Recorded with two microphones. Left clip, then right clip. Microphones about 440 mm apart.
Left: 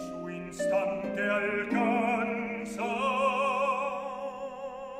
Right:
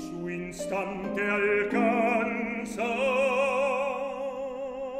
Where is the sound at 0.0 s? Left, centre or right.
Right.